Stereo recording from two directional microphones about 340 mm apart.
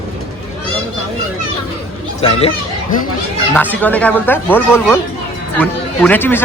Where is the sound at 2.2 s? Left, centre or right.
Centre.